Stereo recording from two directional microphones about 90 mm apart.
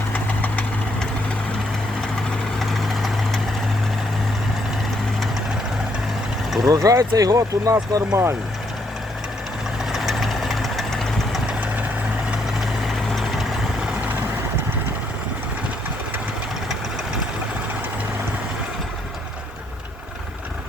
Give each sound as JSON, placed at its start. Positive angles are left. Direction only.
{"t": 2.6, "sound": "vehicle", "side_deg": 0}
{"t": 6.7, "sound": "speech", "side_deg": -40}
{"t": 9.9, "sound": "vehicle", "side_deg": 0}
{"t": 12.8, "sound": "vehicle", "side_deg": 0}